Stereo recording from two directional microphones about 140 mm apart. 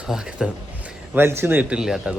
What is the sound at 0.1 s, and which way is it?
Speech, 5° right (ahead or behind).